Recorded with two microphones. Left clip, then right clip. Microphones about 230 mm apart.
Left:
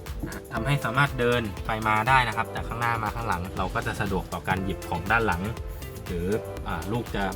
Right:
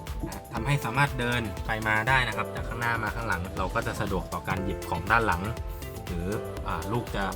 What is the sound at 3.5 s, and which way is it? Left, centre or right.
Speech, centre.